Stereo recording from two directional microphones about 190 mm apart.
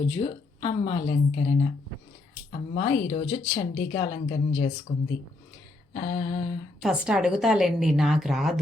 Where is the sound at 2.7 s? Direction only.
30° left (ahead or behind).